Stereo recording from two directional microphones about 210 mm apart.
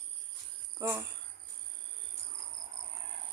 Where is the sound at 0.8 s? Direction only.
10° right (ahead or behind).